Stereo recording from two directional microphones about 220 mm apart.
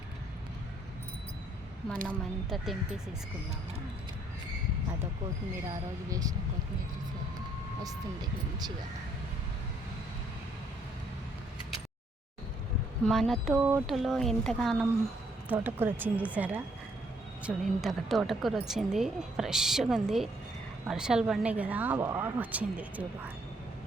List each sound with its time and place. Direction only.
2.0 s a woman's voice: centre (ahead or behind)
6.1 s speech: 15° right (ahead or behind)
13.1 s a woman's voice: centre (ahead or behind)